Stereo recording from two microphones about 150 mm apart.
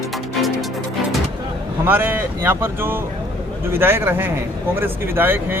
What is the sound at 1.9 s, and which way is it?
Speech, 15° right (ahead or behind).